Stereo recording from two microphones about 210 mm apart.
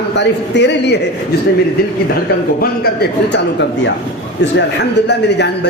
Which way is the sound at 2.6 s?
45° left (ahead or behind).